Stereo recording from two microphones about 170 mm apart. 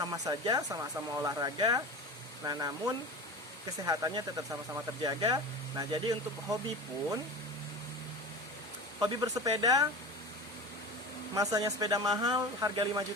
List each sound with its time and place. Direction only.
0.0 s speech: 20° right (ahead or behind)
9.0 s speech: 20° right (ahead or behind)
11.3 s speech: 20° right (ahead or behind)